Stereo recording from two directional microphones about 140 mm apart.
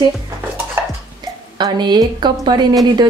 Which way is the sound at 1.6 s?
30° right (ahead or behind).